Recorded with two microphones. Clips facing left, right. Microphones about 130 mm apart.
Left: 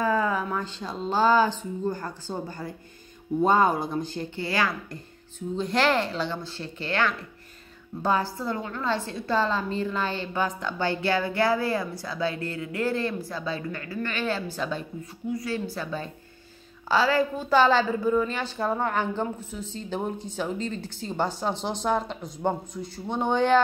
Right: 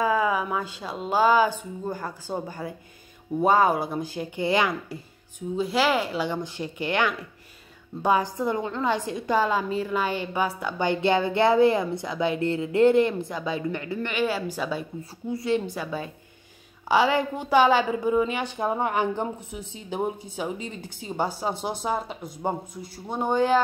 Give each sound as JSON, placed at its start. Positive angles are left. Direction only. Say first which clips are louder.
{"t": 0.0, "sound": "a woman's voice", "louder": "right 1 dB", "side_deg": -10}
{"t": 4.5, "sound": "a woman's voice", "louder": "right 4 dB", "side_deg": -20}
{"t": 5.6, "sound": "a woman's voice", "louder": "right 1 dB", "side_deg": -5}
{"t": 15.2, "sound": "a woman's voice", "louder": "right 4 dB", "side_deg": -25}